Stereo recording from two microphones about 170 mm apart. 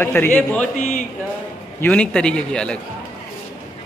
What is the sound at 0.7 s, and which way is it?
Speech, 45° left (ahead or behind).